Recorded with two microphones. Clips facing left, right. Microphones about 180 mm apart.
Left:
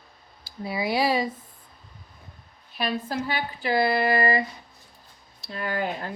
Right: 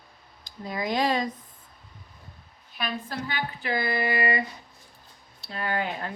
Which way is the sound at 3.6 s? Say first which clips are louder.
Left 6 dB; 35° left (ahead or behind).